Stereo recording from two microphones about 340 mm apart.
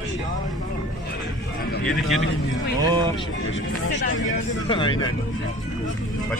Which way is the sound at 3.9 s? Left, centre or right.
Left.